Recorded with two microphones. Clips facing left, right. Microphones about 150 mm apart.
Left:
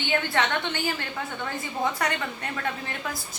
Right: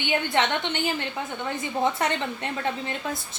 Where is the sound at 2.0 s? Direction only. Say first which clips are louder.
Right 2 dB; 25° right (ahead or behind).